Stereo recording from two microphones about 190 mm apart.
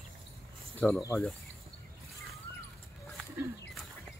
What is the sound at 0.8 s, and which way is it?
Speech, 10° left (ahead or behind).